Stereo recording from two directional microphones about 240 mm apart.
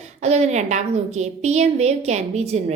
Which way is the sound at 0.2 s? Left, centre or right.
Right.